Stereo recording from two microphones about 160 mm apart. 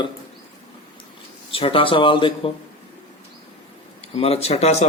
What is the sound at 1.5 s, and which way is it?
Speech, 35° left (ahead or behind).